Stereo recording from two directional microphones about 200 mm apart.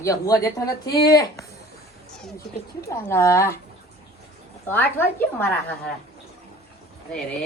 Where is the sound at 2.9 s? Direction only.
15° left (ahead or behind).